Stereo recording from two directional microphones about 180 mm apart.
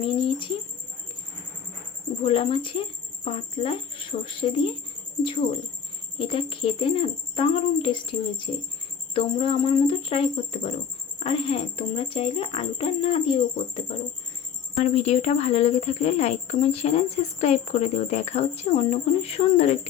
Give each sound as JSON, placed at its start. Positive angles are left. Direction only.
{"t": 0.0, "sound": "speech", "side_deg": 30}
{"t": 2.2, "sound": "speech", "side_deg": 30}